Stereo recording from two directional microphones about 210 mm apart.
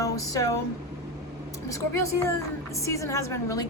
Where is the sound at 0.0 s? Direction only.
15° left (ahead or behind).